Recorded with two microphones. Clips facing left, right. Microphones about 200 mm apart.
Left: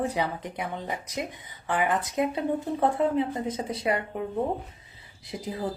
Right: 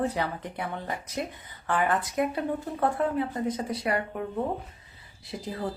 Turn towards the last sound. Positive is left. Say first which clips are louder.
# left 1 dB
turn(degrees=20)  # may be behind; listen again after turning